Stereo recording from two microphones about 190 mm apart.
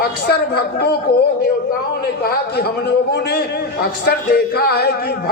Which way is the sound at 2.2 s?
55° left (ahead or behind).